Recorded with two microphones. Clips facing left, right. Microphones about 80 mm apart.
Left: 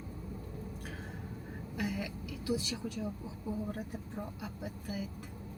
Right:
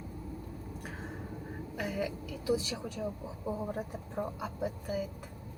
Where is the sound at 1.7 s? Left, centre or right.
Centre.